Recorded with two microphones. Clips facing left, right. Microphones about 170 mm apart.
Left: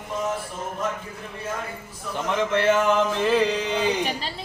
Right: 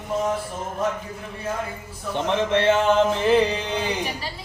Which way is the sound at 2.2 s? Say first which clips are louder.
Right 1 dB; 25° right (ahead or behind).